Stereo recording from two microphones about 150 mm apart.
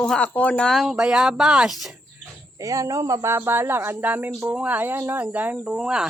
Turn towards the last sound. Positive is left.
turn(degrees=-5)  # may be behind; listen again after turning